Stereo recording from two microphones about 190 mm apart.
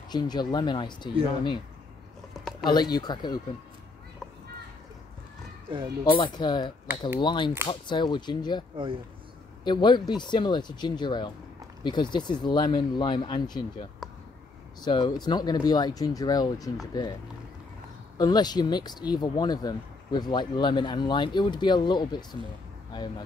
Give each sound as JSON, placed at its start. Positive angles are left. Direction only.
{"t": 0.1, "sound": "speech", "side_deg": 20}
{"t": 2.6, "sound": "speech", "side_deg": 20}
{"t": 6.1, "sound": "speech", "side_deg": 25}
{"t": 8.7, "sound": "speech", "side_deg": -25}
{"t": 9.7, "sound": "speech", "side_deg": 25}
{"t": 18.1, "sound": "speech", "side_deg": 20}